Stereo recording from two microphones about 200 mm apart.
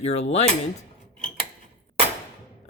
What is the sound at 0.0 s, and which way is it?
Speech, 35° left (ahead or behind).